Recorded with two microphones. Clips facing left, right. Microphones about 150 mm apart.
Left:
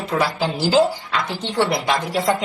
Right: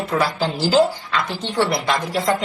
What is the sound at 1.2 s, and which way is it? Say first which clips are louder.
Speech: left 1 dB; 20° left (ahead or behind).